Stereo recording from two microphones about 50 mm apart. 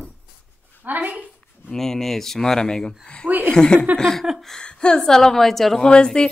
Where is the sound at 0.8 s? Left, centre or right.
Right.